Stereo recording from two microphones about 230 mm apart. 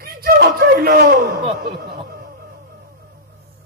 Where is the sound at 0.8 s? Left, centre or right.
Right.